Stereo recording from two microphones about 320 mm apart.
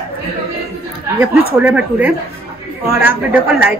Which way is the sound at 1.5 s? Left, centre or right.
Centre.